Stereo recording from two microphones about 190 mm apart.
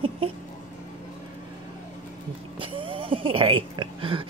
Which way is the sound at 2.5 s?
25° right (ahead or behind).